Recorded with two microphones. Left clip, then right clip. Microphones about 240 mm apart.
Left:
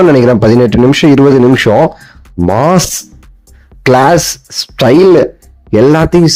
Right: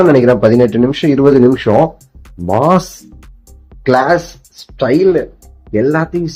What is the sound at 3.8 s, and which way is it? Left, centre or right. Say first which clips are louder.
Speech: left 4 dB; left.